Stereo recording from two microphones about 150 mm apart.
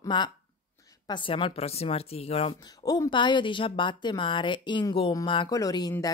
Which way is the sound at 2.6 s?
25° left (ahead or behind).